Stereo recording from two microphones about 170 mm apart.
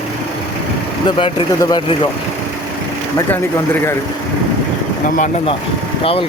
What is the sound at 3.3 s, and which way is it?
Speech, 15° left (ahead or behind).